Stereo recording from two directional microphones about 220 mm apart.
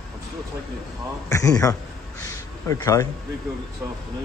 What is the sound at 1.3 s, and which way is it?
Speech, 15° left (ahead or behind).